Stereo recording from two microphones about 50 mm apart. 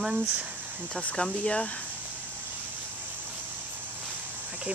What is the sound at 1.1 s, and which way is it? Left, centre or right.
Speech, centre.